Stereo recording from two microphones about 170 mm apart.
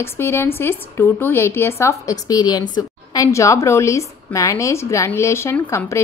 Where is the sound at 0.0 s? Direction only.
15° left (ahead or behind).